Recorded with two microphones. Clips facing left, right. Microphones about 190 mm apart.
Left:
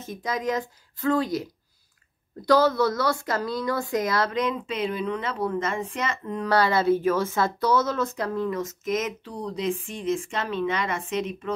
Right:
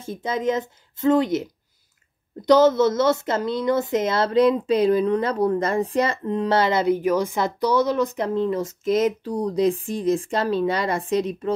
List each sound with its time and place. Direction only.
0.0 s a woman's voice: 30° right (ahead or behind)